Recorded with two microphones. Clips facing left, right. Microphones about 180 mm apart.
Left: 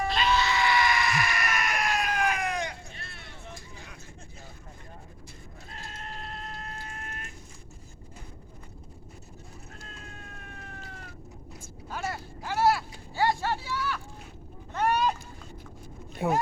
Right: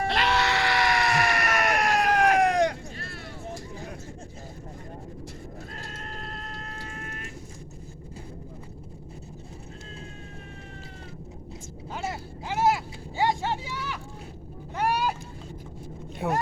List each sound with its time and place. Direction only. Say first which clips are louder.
0.1 s sheep: right 1 dB; 75° right (ahead or behind)
11.9 s vehicle: right 1 dB; 20° right (ahead or behind)
16.1 s vehicle: left 1 dB; centre (ahead or behind)